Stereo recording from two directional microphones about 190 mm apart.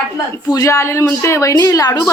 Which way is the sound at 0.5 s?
15° left (ahead or behind).